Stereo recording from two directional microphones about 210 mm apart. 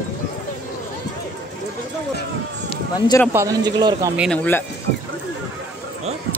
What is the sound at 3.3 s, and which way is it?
Speech, 15° right (ahead or behind).